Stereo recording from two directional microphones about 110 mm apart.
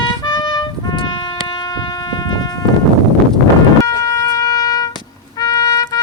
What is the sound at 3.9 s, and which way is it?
Music, 30° left (ahead or behind).